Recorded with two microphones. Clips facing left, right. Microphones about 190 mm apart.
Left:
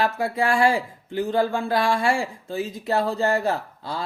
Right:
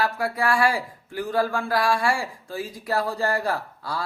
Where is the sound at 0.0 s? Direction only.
25° left (ahead or behind).